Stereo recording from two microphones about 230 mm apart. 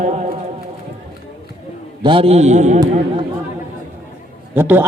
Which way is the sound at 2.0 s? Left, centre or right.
Right.